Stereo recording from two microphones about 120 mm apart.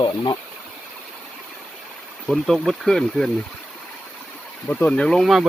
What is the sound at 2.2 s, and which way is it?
Speech, centre (ahead or behind).